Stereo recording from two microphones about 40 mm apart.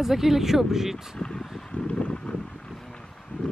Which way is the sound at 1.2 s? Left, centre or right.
Centre.